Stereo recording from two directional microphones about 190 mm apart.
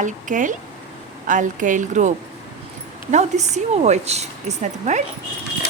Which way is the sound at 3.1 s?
35° right (ahead or behind).